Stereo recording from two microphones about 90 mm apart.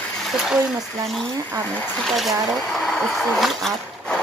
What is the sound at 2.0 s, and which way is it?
Speech, centre (ahead or behind).